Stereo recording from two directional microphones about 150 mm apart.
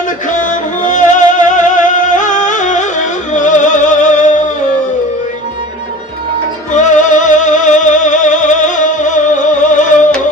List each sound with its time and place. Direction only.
0.3 s music: 55° left (ahead or behind)
6.7 s music: 55° left (ahead or behind)